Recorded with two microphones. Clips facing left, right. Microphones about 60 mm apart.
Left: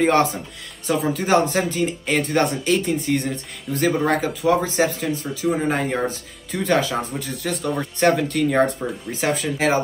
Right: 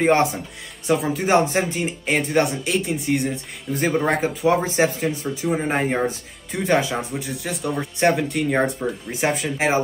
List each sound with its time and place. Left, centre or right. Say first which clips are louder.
0.0 s speech: even; centre
4.1 s speech: even; right